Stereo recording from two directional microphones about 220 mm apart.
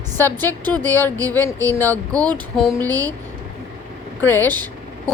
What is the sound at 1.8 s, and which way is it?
Speech, 15° right (ahead or behind).